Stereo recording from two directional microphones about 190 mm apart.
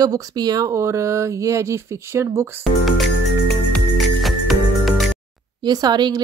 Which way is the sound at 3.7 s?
Centre (ahead or behind).